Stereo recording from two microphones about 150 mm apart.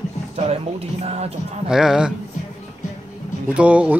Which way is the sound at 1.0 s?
45° right (ahead or behind).